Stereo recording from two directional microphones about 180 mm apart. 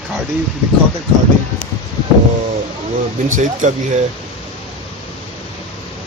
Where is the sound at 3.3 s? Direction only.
45° right (ahead or behind).